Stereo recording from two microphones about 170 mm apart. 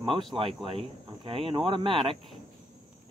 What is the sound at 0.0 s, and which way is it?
Speech, 30° right (ahead or behind).